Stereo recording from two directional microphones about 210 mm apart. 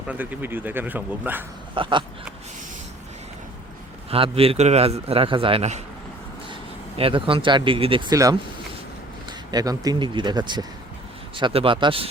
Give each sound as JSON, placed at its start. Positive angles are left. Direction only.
{"t": 0.1, "sound": "speech", "side_deg": -10}
{"t": 1.7, "sound": "a man's voice", "side_deg": -25}
{"t": 4.1, "sound": "a man's voice", "side_deg": -25}
{"t": 7.0, "sound": "a man's voice", "side_deg": -25}
{"t": 9.5, "sound": "a man's voice", "side_deg": -20}